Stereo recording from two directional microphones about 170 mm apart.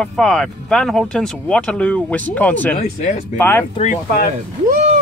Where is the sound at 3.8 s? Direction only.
50° left (ahead or behind).